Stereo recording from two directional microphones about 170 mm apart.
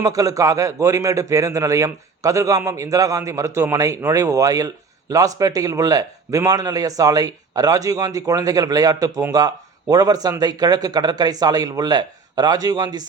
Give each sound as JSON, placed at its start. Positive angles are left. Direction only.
{"t": 0.0, "sound": "a man's voice", "side_deg": -20}